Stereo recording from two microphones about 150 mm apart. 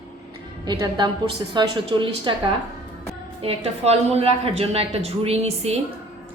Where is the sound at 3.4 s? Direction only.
40° right (ahead or behind).